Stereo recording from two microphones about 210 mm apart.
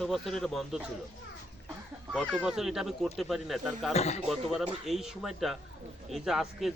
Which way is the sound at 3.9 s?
30° left (ahead or behind).